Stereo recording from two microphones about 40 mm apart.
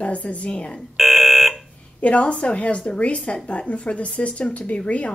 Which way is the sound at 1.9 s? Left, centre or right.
Left.